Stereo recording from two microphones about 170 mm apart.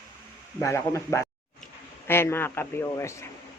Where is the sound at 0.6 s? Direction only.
15° left (ahead or behind).